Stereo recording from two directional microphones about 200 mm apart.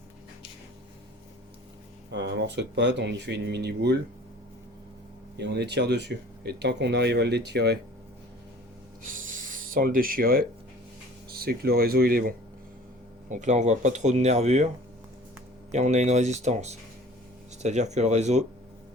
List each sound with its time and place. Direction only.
2.0 s speech: 60° right (ahead or behind)
5.4 s speech: 55° right (ahead or behind)
9.7 s speech: 45° right (ahead or behind)
13.2 s speech: 35° right (ahead or behind)
15.7 s speech: 35° right (ahead or behind)